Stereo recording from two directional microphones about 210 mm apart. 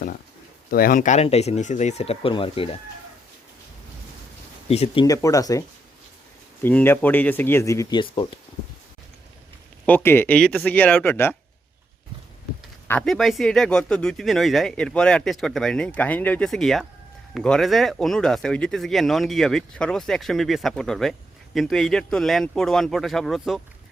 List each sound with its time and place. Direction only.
0.7 s speech: 45° left (ahead or behind); by 2.6 s 25° left (ahead or behind)
4.7 s speech: 30° left (ahead or behind)
5.0 s speech: 15° left (ahead or behind)
9.8 s speech: 10° left (ahead or behind)
12.9 s speech: 5° left (ahead or behind)